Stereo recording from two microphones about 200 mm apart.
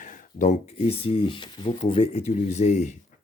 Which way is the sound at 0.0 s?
40° left (ahead or behind).